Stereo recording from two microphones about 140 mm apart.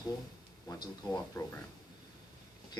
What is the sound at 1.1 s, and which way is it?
Speech, 15° left (ahead or behind).